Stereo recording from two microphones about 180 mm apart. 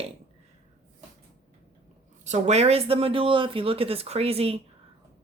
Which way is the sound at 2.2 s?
40° right (ahead or behind).